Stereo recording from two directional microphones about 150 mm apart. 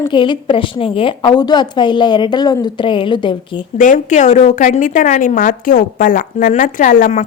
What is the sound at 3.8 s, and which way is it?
A woman's voice, 55° left (ahead or behind).